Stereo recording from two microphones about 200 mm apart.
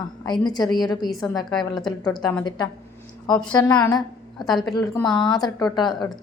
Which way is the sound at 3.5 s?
20° left (ahead or behind).